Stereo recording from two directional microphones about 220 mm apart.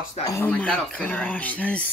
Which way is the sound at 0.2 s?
15° left (ahead or behind).